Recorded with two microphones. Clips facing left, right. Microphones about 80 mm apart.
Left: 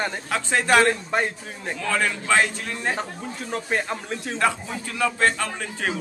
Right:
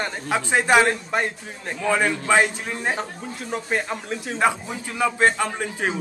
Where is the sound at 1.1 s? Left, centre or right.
Centre.